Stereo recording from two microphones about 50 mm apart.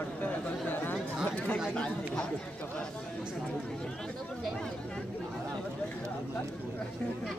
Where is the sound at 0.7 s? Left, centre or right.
Left.